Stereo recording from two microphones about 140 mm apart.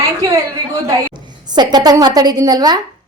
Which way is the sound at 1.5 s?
30° right (ahead or behind).